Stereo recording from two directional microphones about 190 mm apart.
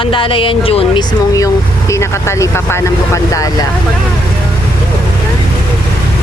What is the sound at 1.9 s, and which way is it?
Speech, 15° left (ahead or behind).